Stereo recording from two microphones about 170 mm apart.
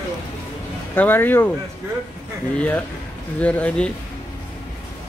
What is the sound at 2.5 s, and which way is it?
Speech, 10° left (ahead or behind).